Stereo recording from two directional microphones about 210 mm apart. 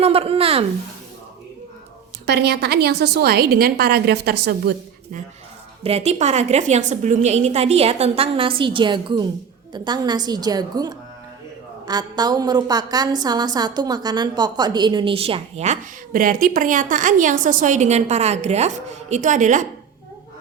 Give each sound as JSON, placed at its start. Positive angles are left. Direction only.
{"t": 0.0, "sound": "a woman's voice", "side_deg": -25}
{"t": 2.2, "sound": "a woman's voice", "side_deg": -50}
{"t": 5.8, "sound": "a woman's voice", "side_deg": -30}